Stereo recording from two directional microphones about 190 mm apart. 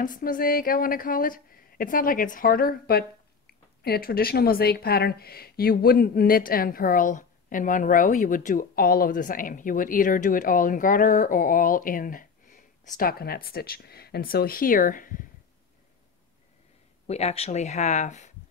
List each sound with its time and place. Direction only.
0.0 s a woman's voice: 45° left (ahead or behind)
17.1 s speech: 35° left (ahead or behind)